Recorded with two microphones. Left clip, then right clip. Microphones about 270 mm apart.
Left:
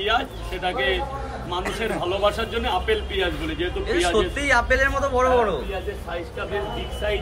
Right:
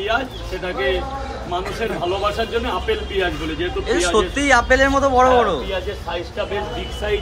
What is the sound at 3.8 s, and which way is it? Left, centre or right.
A man's voice, centre.